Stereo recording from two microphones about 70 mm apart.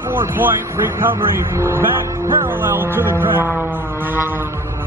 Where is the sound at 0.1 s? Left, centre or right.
Right.